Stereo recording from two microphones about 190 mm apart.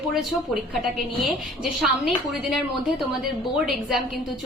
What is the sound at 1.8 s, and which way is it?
Speech, centre (ahead or behind).